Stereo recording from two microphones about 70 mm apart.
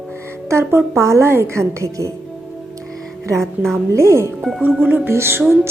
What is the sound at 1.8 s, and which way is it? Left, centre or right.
Speech, right.